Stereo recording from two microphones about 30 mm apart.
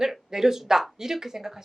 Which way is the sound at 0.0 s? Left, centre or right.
Centre.